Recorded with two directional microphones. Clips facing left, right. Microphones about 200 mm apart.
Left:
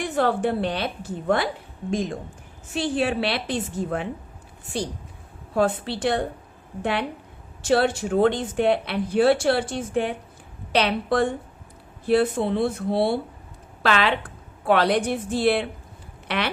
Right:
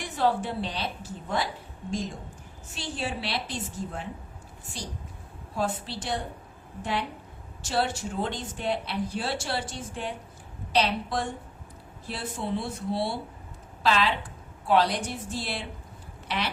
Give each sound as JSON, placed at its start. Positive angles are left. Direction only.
{"t": 0.0, "sound": "speech", "side_deg": 55}
{"t": 5.5, "sound": "speech", "side_deg": 65}
{"t": 7.6, "sound": "speech", "side_deg": 60}